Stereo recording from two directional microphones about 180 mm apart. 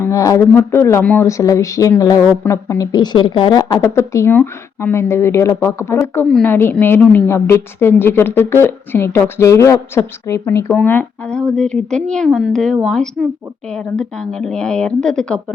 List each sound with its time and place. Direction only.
0.0 s speech: 20° left (ahead or behind)